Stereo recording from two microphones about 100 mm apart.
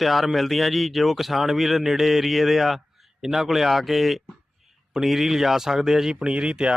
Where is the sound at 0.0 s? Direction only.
Centre (ahead or behind).